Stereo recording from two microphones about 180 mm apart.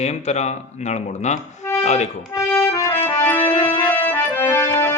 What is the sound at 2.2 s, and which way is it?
Music, 15° left (ahead or behind).